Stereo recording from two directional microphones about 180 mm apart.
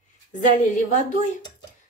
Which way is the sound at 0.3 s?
45° left (ahead or behind).